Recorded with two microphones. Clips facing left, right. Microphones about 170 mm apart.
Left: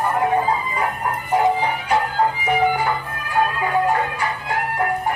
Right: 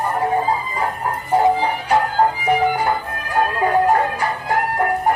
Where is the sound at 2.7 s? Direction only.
45° right (ahead or behind).